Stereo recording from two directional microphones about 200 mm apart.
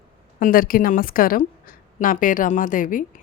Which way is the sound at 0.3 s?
45° left (ahead or behind).